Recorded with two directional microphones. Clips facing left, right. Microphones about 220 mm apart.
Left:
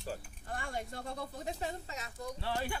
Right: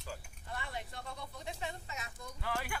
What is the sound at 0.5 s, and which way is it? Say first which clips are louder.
A woman's voice: left 4 dB; 45° left (ahead or behind).